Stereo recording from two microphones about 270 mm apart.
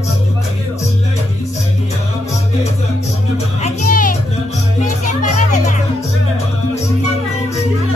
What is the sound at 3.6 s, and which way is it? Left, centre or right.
Music, left.